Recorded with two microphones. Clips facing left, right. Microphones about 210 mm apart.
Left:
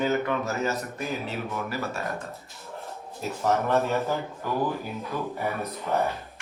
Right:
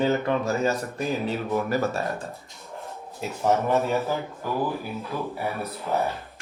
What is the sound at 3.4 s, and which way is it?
Speech, 15° right (ahead or behind).